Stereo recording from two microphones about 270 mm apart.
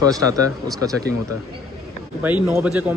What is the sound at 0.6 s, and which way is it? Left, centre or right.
Speech, centre.